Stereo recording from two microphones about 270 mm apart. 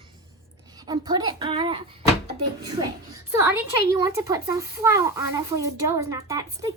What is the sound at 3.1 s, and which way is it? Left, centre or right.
A woman's voice, centre.